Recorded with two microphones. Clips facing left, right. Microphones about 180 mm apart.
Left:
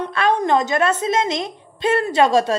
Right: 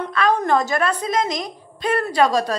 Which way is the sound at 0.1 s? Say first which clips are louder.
Even; 30° left (ahead or behind).